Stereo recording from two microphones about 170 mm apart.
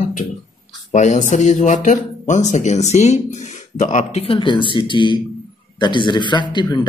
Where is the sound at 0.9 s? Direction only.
45° left (ahead or behind).